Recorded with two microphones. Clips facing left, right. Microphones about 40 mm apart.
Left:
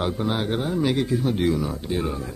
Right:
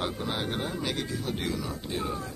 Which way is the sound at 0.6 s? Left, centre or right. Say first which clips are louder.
Left 8 dB; centre.